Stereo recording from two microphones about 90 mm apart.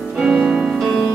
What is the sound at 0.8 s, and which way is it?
Music, centre (ahead or behind).